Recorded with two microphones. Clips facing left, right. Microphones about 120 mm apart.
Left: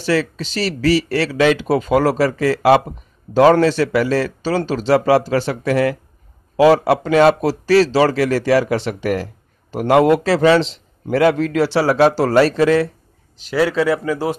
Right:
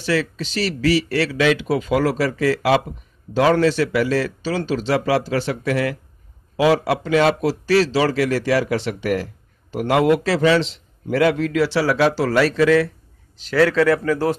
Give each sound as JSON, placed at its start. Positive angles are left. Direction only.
{"t": 0.0, "sound": "a man's voice", "side_deg": 35}
{"t": 13.4, "sound": "speech", "side_deg": 15}